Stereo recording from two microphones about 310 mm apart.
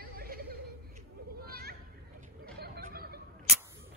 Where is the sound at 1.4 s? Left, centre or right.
Right.